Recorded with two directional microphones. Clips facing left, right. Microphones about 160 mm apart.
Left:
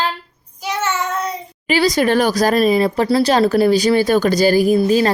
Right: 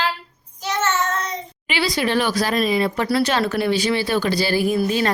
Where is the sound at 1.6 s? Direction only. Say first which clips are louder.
Left 7 dB; 40° left (ahead or behind).